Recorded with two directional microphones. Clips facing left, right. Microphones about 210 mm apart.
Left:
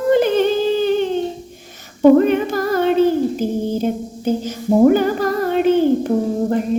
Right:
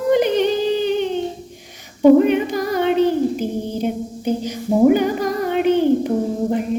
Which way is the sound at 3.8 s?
15° right (ahead or behind).